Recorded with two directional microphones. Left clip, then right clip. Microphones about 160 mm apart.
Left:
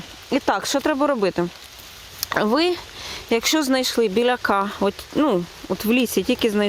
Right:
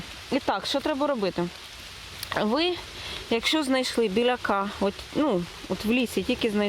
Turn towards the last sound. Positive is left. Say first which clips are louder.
# left 6 dB
turn(degrees=30)  # may be behind; listen again after turning